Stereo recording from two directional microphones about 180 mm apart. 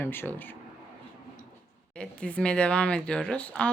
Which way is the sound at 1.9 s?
5° left (ahead or behind).